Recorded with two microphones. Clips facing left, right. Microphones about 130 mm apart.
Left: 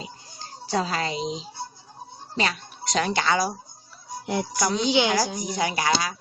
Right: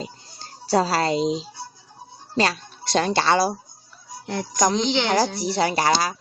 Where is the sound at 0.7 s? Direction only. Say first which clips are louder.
Right 6 dB; 35° right (ahead or behind).